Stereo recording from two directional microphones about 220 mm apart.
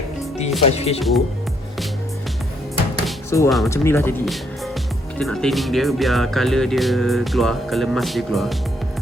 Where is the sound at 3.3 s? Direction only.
10° left (ahead or behind).